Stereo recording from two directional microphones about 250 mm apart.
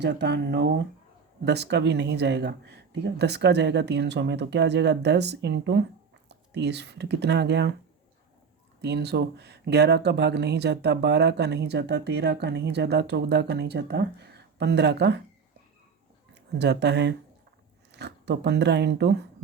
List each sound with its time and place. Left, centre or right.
0.0 s speech: right
8.8 s speech: right
16.3 s speech: right